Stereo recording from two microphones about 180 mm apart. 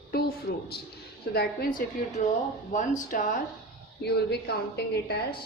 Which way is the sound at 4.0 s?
65° left (ahead or behind).